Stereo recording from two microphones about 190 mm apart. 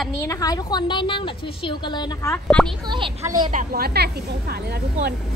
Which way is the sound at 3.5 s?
45° right (ahead or behind).